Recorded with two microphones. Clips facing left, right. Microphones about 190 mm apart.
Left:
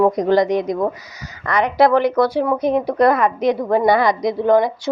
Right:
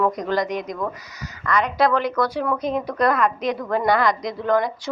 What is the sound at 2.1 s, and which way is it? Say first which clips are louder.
Speech: left 6 dB; 30° left (ahead or behind).